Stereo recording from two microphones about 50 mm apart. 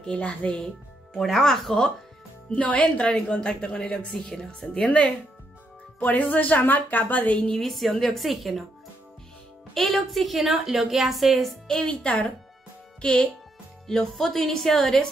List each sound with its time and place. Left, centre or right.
0.1 s speech: left
1.1 s a woman's voice: centre
2.5 s speech: left
2.8 s speech: centre
6.0 s a woman's voice: left
7.4 s a woman's voice: centre
9.8 s a woman's voice: centre
11.6 s a woman's voice: centre
13.8 s a woman's voice: centre